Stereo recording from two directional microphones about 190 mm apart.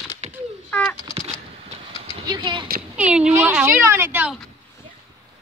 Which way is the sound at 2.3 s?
25° right (ahead or behind).